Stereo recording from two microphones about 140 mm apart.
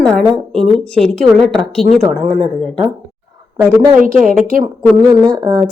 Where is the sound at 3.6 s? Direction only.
15° right (ahead or behind).